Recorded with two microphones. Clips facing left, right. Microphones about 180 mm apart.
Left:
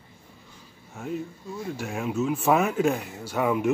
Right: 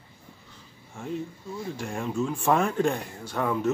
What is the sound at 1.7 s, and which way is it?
Speech, 5° left (ahead or behind).